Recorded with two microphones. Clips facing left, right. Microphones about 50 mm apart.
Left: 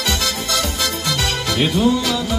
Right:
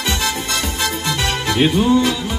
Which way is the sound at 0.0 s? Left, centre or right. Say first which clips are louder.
Right 1 dB; centre.